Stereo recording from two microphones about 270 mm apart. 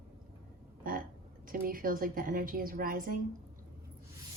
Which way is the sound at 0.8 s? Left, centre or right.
Right.